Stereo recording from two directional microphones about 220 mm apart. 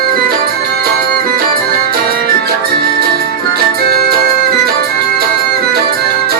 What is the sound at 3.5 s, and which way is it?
Music, 45° right (ahead or behind).